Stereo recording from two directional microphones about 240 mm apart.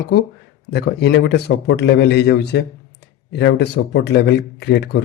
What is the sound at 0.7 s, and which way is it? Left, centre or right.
A man's voice, left.